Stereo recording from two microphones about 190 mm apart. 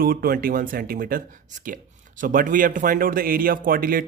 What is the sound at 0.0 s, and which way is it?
Speech, 50° right (ahead or behind).